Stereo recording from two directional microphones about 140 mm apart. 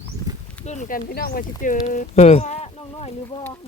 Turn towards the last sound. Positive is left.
turn(degrees=50)  # may be behind; listen again after turning